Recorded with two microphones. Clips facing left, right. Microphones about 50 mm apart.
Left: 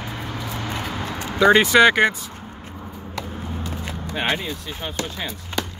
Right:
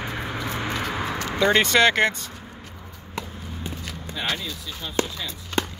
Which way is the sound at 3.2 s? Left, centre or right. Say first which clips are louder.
Left 6 dB; left.